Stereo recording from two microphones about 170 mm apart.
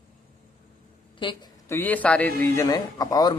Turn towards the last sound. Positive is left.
turn(degrees=20)  # may be behind; listen again after turning